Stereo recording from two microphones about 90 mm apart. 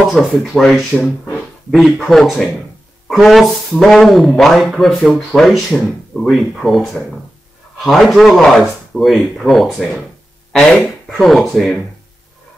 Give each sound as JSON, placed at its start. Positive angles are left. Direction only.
{"t": 0.0, "sound": "speech", "side_deg": 0}